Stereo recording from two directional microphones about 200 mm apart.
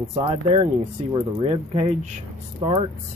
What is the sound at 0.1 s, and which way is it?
Speech, 25° right (ahead or behind).